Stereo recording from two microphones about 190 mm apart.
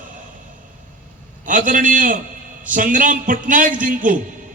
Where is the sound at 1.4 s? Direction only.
45° right (ahead or behind).